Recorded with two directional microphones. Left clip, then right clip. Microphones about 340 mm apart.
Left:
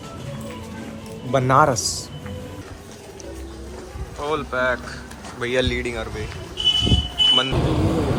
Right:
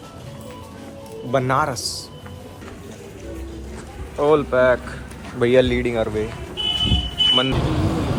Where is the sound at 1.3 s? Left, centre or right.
Centre.